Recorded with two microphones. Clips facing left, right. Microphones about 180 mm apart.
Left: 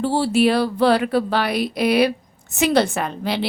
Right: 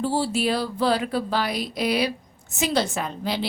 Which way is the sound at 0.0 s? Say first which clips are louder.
Left 6 dB; 65° left (ahead or behind).